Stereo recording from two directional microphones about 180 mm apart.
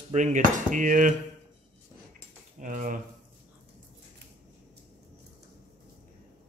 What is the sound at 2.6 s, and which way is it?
Speech, 45° right (ahead or behind).